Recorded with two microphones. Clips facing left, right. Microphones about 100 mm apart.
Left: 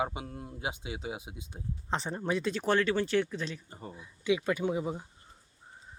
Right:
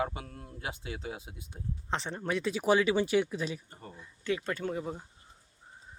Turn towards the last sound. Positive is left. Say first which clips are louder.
# left 3 dB
turn(degrees=10)  # may be behind; listen again after turning